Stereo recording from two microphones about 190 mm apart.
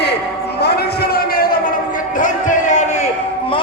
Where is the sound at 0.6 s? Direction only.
60° left (ahead or behind); by 3.1 s 40° left (ahead or behind).